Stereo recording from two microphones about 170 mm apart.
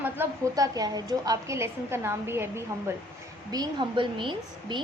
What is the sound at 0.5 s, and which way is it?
A woman's voice, 20° right (ahead or behind).